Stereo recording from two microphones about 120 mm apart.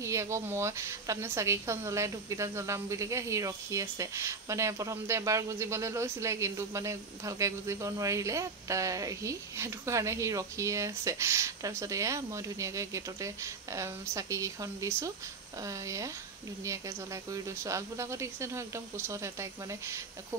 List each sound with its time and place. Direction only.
0.0 s a woman's voice: 25° right (ahead or behind)